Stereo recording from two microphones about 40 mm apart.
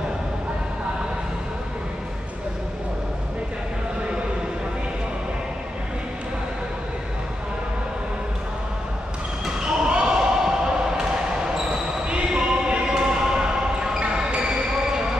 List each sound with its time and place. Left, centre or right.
9.7 s basketball bounce: right